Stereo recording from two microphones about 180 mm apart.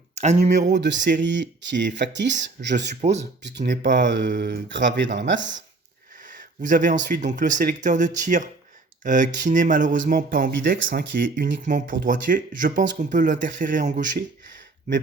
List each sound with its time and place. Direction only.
0.2 s speech: 40° right (ahead or behind)
0.7 s speech: 75° right (ahead or behind)
2.9 s speech: 40° right (ahead or behind)
3.7 s speech: 80° right
6.2 s speech: 45° right (ahead or behind)
10.8 s speech: 90° right
11.6 s speech: 45° right (ahead or behind)